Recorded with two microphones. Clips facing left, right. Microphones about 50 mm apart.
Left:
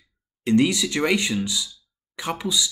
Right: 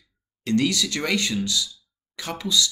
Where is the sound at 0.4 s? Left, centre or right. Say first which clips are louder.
Left 3 dB; centre.